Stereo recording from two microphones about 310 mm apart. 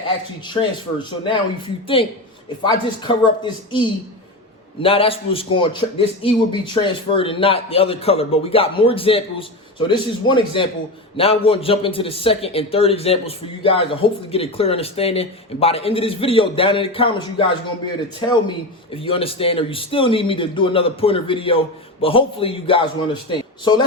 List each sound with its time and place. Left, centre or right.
0.4 s a man's voice: centre
18.9 s a man's voice: centre